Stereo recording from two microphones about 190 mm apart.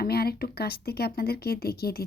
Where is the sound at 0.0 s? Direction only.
55° left (ahead or behind).